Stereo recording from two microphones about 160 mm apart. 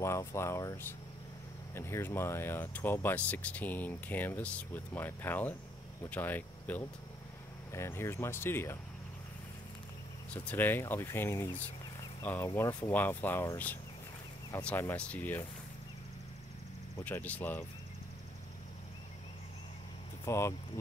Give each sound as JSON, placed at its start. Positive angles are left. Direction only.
{"t": 0.0, "sound": "speech", "side_deg": 15}
{"t": 10.3, "sound": "speech", "side_deg": 10}
{"t": 16.9, "sound": "speech", "side_deg": 15}
{"t": 20.2, "sound": "speech", "side_deg": 15}